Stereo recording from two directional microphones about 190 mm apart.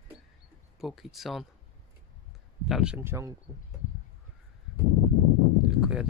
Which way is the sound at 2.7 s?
5° right (ahead or behind).